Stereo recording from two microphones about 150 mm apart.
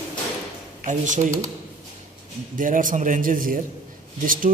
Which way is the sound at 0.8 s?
55° right (ahead or behind).